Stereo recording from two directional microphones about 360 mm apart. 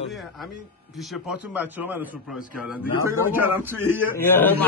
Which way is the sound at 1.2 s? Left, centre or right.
Centre.